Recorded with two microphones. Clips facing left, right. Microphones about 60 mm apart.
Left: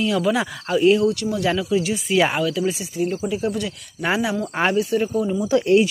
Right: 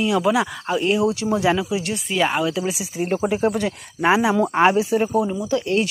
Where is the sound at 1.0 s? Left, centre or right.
Centre.